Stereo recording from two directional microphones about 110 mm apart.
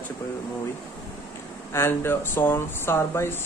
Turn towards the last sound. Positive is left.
turn(degrees=20)  # may be behind; listen again after turning